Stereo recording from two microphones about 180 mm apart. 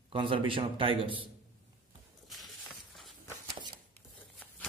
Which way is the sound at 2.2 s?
Centre (ahead or behind).